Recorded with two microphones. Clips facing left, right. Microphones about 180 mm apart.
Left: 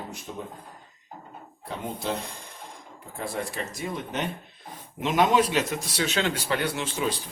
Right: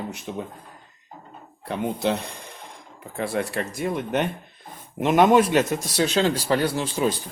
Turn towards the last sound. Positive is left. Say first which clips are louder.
# right 5 dB
turn(degrees=-35)  # may be behind; listen again after turning